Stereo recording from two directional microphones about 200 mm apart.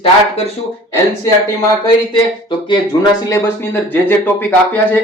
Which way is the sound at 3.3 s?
15° left (ahead or behind).